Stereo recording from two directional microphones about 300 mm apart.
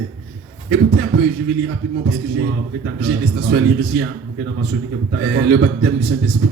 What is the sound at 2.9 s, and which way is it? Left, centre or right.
A man's voice, right.